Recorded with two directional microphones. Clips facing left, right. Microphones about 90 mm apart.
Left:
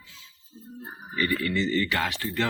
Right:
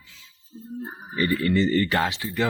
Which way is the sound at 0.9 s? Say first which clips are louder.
Right 2 dB; 30° right (ahead or behind).